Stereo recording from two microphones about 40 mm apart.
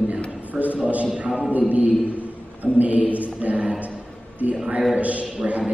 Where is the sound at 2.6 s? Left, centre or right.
Right.